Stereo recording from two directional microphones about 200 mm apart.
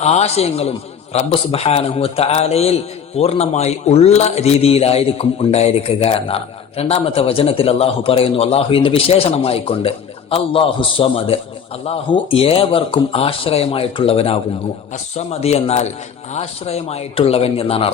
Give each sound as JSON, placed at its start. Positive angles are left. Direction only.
{"t": 0.0, "sound": "a man's voice", "side_deg": 35}